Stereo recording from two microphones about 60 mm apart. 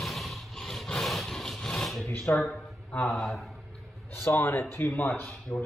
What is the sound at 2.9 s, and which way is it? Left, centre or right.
Speech, centre.